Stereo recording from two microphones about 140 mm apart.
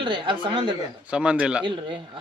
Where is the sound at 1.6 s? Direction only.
35° right (ahead or behind).